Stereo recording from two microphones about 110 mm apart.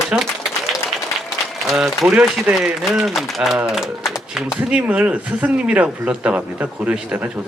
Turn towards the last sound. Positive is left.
turn(degrees=-15)  # may be behind; listen again after turning